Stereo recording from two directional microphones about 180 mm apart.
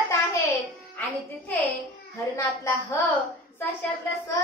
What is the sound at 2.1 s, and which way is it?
Speech, 15° left (ahead or behind).